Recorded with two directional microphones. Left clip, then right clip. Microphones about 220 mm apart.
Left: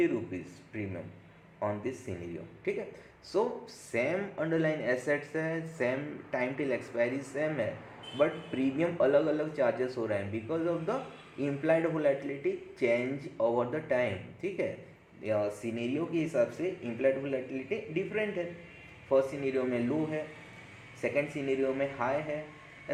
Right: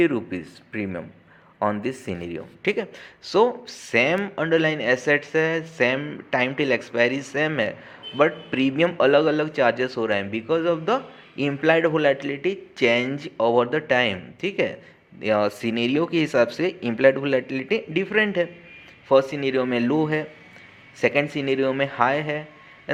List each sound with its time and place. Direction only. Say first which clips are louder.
0.0 s speech: right 8 dB; 30° right (ahead or behind)
19.9 s a man's voice: right 10 dB; 45° right (ahead or behind)
21.0 s speech: right 10 dB; 35° right (ahead or behind)